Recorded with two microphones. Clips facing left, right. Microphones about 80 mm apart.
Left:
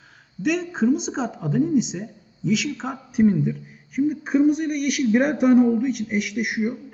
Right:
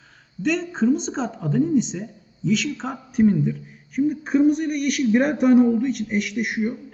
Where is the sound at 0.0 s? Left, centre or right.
Centre.